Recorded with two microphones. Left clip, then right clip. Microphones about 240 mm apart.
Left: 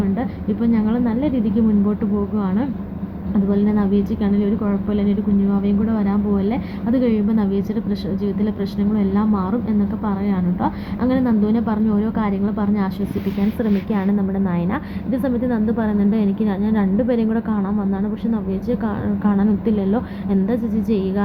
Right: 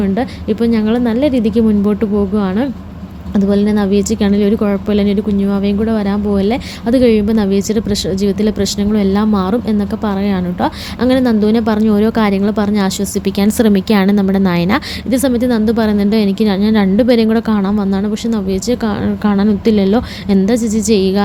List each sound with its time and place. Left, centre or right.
0.0 s a woman's voice: right